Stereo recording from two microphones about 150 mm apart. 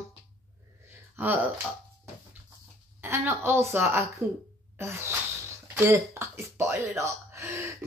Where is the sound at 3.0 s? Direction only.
15° right (ahead or behind).